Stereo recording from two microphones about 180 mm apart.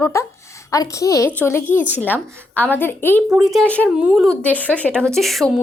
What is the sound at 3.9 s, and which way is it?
A woman's voice, 5° right (ahead or behind).